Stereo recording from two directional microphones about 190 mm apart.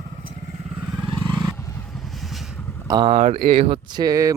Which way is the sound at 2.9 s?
25° right (ahead or behind).